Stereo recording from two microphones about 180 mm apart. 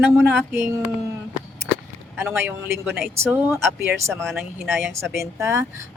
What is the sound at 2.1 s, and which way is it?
Speech, 15° right (ahead or behind).